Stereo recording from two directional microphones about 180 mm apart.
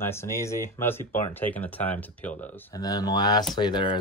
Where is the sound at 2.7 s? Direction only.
20° left (ahead or behind).